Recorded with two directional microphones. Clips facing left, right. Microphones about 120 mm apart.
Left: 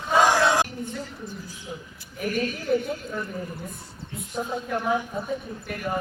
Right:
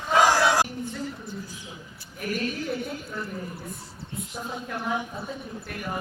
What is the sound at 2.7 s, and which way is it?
Speech, 5° right (ahead or behind).